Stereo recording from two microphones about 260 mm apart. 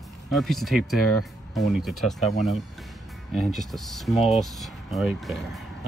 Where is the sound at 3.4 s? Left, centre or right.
Centre.